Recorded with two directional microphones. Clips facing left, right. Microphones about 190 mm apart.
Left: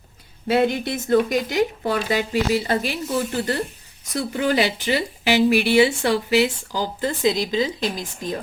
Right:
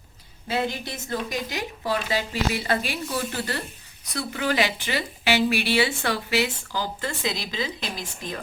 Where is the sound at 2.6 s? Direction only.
25° left (ahead or behind).